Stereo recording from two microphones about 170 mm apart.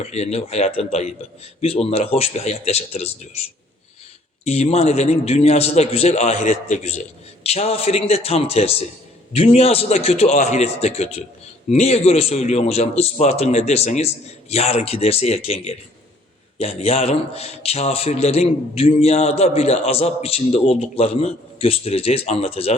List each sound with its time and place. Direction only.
0.0 s a man's voice: 40° left (ahead or behind)
4.4 s a man's voice: 40° left (ahead or behind)